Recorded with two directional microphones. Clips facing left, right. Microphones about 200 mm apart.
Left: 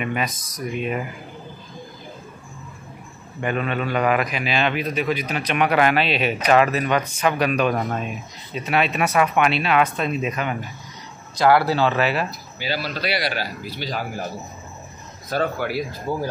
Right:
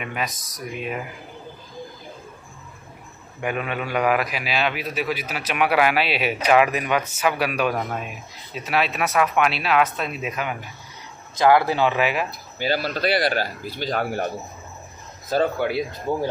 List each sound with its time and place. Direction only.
0.0 s speech: centre (ahead or behind)
3.3 s a man's voice: 10° right (ahead or behind)
11.3 s a man's voice: 20° right (ahead or behind)
12.3 s speech: 50° right (ahead or behind)
15.2 s speech: 25° right (ahead or behind)